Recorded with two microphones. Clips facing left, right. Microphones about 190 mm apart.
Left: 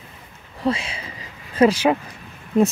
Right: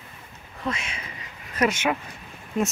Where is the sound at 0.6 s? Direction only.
30° left (ahead or behind).